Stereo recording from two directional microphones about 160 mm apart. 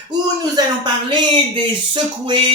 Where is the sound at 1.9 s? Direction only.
30° right (ahead or behind).